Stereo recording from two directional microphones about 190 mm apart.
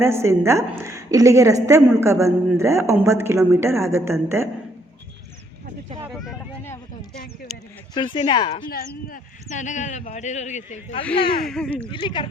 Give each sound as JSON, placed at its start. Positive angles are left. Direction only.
{"t": 0.0, "sound": "a woman's voice", "side_deg": -15}
{"t": 7.5, "sound": "speech", "side_deg": 0}
{"t": 7.9, "sound": "speech", "side_deg": 25}
{"t": 8.7, "sound": "speech", "side_deg": 45}
{"t": 11.4, "sound": "speech", "side_deg": 5}
{"t": 11.9, "sound": "speech", "side_deg": 25}